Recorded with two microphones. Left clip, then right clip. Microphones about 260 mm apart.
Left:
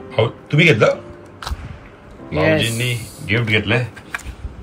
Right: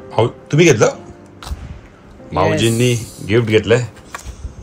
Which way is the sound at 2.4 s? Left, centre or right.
Right.